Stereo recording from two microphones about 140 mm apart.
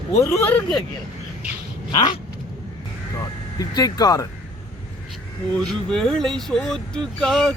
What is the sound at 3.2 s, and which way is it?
Speech, 25° left (ahead or behind).